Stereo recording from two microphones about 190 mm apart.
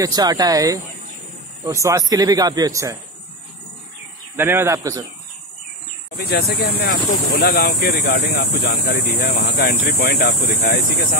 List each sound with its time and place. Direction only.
0.0 s speech: 20° right (ahead or behind)
4.4 s speech: 10° right (ahead or behind)
6.1 s speech: 55° left (ahead or behind)